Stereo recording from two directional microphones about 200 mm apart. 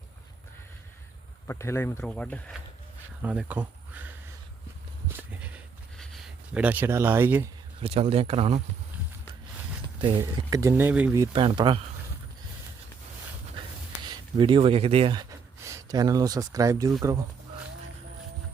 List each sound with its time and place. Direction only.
1.5 s speech: 15° left (ahead or behind)
3.2 s insect: 10° right (ahead or behind)
5.0 s horse: 10° right (ahead or behind)
6.0 s a sound: centre (ahead or behind)
7.8 s speech: 30° right (ahead or behind)
10.0 s speech: 25° right (ahead or behind)
14.1 s speech: 25° right (ahead or behind)